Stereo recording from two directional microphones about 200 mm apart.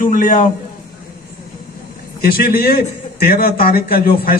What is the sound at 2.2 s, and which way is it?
A man's voice, 50° left (ahead or behind).